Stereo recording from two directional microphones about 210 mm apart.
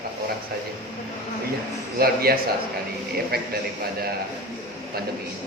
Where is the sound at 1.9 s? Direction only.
45° right (ahead or behind).